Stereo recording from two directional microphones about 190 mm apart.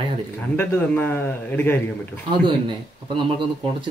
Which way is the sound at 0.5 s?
10° left (ahead or behind).